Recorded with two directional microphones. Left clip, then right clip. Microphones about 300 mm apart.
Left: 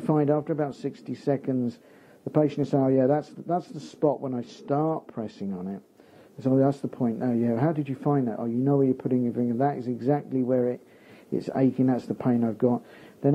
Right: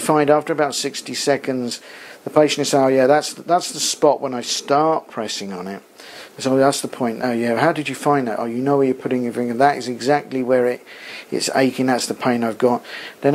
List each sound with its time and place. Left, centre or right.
0.0 s speech: centre
5.5 s speech: centre